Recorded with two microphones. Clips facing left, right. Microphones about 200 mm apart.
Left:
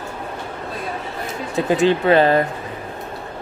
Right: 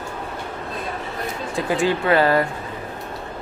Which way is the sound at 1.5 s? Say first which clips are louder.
Left 5 dB; 20° left (ahead or behind).